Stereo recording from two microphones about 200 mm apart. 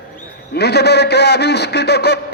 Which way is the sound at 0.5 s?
55° left (ahead or behind).